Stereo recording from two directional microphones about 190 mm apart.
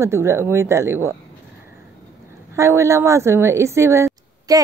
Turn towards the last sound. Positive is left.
turn(degrees=-20)  # may be behind; listen again after turning